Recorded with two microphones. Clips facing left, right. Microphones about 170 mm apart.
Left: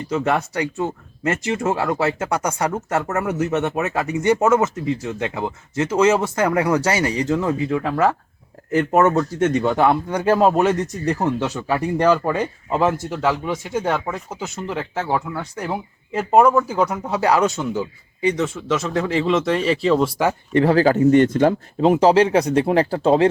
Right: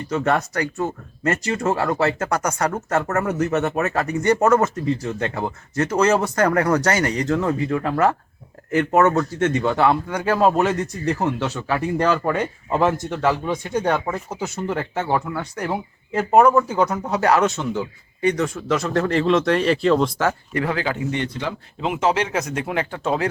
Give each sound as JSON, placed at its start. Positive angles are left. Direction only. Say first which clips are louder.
{"t": 0.1, "sound": "speech", "louder": "even", "side_deg": 10}
{"t": 20.5, "sound": "speech", "louder": "left 8 dB", "side_deg": 30}